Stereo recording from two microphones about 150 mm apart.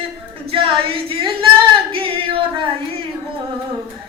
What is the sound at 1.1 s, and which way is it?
Singing, 35° right (ahead or behind).